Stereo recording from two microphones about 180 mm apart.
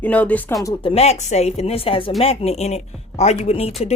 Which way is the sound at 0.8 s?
35° left (ahead or behind).